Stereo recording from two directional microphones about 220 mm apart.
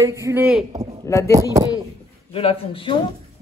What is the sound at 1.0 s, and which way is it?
Speech, 15° left (ahead or behind).